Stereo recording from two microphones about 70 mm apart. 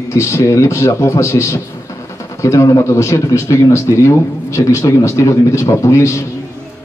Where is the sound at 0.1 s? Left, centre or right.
Left.